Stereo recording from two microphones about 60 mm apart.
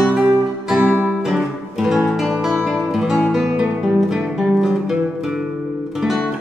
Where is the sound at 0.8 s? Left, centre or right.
Right.